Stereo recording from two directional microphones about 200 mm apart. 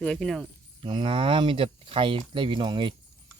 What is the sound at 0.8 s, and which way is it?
Speech, 25° right (ahead or behind).